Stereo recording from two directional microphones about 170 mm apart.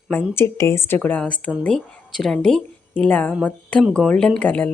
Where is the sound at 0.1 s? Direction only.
10° left (ahead or behind).